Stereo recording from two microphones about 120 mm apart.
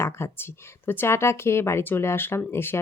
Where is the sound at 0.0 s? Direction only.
20° left (ahead or behind).